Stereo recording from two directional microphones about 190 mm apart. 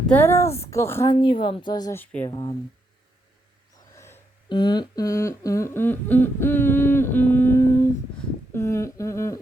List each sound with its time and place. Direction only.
0.1 s humming: 10° left (ahead or behind)
2.3 s speech: 25° left (ahead or behind)
3.9 s music: 15° left (ahead or behind)
4.4 s humming: 25° left (ahead or behind)